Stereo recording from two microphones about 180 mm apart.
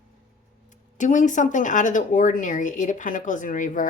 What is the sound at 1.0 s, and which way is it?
Speech, 45° left (ahead or behind).